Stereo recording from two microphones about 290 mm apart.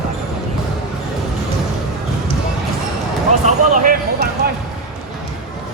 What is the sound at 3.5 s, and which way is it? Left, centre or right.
Basketball bounce, right.